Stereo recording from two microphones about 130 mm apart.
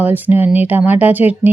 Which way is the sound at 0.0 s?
15° right (ahead or behind).